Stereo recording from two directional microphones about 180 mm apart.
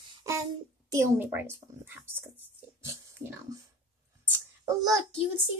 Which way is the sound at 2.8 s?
15° right (ahead or behind).